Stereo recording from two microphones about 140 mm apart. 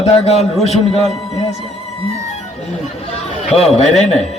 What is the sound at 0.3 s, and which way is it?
Speech, 50° left (ahead or behind).